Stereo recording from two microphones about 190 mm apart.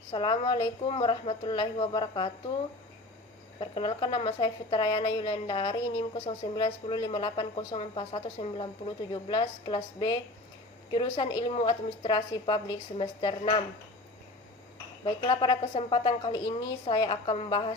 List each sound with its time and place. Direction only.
0.1 s a woman's voice: 25° left (ahead or behind)
3.6 s a woman's voice: 25° left (ahead or behind)
15.0 s a woman's voice: 25° left (ahead or behind)